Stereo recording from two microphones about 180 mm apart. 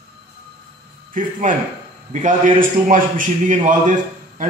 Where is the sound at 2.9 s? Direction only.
45° right (ahead or behind).